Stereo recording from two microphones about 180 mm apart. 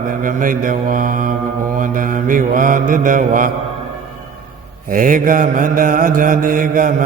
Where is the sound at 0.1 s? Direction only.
50° right (ahead or behind).